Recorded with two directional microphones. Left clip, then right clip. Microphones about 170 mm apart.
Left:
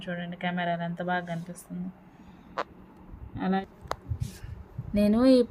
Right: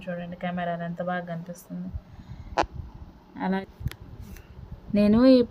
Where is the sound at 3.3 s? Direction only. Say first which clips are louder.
Even; 30° right (ahead or behind).